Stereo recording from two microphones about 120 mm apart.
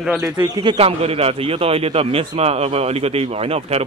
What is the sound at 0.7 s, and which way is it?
A man's voice, 55° right (ahead or behind).